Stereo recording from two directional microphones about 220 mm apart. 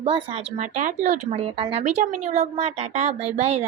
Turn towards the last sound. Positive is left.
turn(degrees=-30)  # may be behind; listen again after turning